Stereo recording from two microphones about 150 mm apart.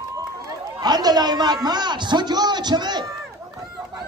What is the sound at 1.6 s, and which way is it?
A man's voice, 30° right (ahead or behind).